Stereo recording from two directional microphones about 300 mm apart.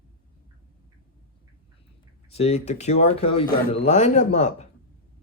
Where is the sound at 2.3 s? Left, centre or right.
Left.